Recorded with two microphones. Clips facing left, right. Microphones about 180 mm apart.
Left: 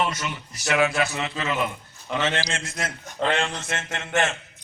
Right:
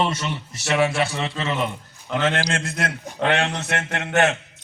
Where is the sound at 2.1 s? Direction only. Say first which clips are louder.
Right 4 dB; 55° right (ahead or behind).